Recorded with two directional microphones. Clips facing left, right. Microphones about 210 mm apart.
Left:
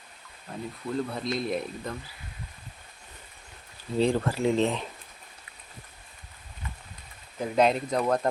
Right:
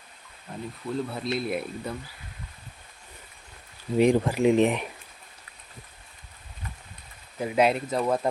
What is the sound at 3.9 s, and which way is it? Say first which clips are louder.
Speech: right 4 dB; 15° right (ahead or behind).